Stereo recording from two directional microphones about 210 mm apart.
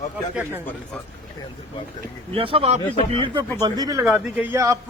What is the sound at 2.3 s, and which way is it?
Speech, 25° right (ahead or behind).